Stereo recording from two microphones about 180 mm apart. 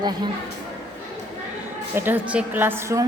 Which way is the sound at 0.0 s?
25° right (ahead or behind).